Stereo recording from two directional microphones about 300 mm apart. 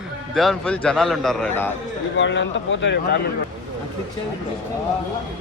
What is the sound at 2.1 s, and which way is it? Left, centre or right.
A man's voice, left.